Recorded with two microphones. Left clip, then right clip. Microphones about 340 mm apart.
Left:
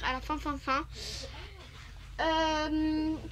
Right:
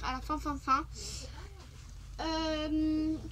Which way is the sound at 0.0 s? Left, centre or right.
Centre.